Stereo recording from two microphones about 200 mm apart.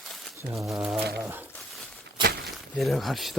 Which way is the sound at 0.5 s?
Centre (ahead or behind).